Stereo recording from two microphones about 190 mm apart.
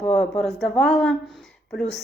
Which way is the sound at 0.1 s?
5° left (ahead or behind).